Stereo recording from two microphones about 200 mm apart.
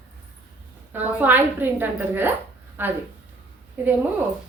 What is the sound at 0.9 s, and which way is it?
A woman's voice, 10° right (ahead or behind).